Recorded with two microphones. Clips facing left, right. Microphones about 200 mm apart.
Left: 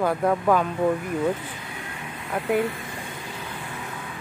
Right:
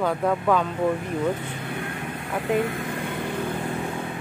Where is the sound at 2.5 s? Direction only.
50° right (ahead or behind).